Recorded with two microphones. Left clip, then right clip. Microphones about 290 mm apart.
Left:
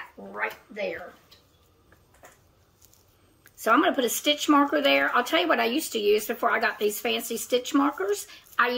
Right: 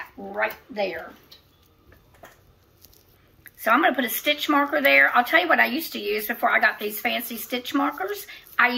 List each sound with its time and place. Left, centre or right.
3.6 s speech: left